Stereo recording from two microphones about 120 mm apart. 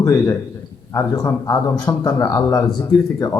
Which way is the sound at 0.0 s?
25° left (ahead or behind).